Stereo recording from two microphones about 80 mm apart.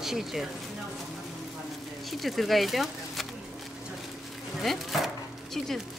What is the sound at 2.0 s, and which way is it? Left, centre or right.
Speech, centre.